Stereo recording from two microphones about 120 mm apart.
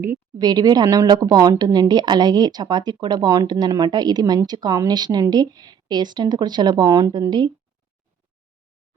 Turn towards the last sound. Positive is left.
turn(degrees=-40)  # may be behind; listen again after turning